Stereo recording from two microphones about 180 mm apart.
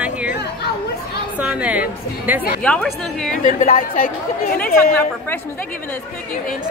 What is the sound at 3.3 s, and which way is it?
Speech, 45° left (ahead or behind).